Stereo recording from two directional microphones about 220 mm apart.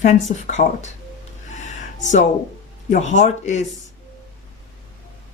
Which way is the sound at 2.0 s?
30° left (ahead or behind).